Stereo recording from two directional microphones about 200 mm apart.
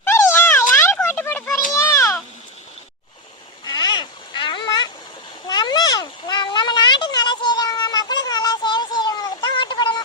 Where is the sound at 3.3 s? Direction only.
20° left (ahead or behind).